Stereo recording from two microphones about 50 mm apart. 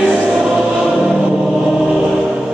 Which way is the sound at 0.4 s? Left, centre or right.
Centre.